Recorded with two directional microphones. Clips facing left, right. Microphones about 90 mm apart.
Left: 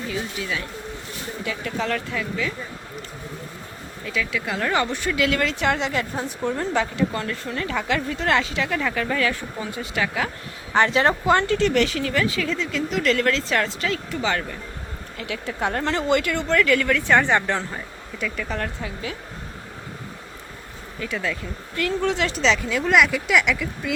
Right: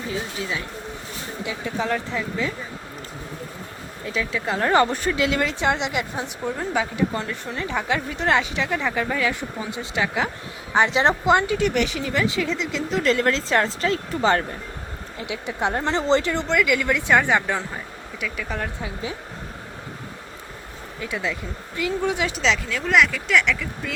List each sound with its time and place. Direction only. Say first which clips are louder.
0.1 s a woman's voice: right 1 dB; 30° right (ahead or behind)
1.5 s a woman's voice: right 1 dB; 20° right (ahead or behind)
4.0 s speech: right 1 dB; 30° right (ahead or behind)
5.2 s a woman's voice: left 1 dB; 20° right (ahead or behind); by 14.4 s 35° right (ahead or behind)
15.2 s a woman's voice: right 1 dB; 20° right (ahead or behind)
16.6 s a woman's voice: left 2 dB; 10° right (ahead or behind)
17.2 s speech: even; 5° right (ahead or behind)
21.0 s a woman's voice: even; 20° right (ahead or behind)
22.4 s speech: left 2 dB; centre (ahead or behind)